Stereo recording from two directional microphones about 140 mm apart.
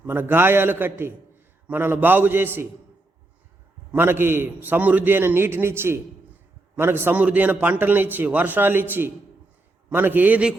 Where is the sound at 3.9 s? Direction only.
15° right (ahead or behind).